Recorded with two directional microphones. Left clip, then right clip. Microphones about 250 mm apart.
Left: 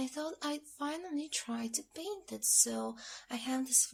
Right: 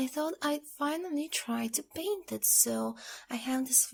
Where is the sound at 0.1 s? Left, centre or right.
Right.